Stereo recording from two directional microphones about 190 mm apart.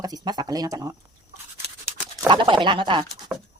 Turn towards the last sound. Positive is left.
turn(degrees=0)  # may be behind; listen again after turning